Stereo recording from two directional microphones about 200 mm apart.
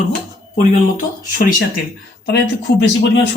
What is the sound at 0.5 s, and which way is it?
Speech, 40° left (ahead or behind).